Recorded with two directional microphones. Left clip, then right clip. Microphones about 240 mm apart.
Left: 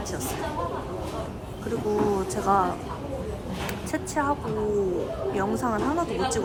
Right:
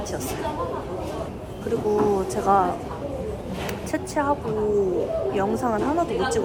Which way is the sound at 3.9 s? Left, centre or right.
Centre.